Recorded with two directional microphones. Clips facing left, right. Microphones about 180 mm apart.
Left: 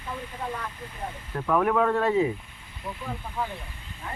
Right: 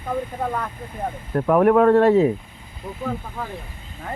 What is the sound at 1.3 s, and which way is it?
Speech, 50° right (ahead or behind).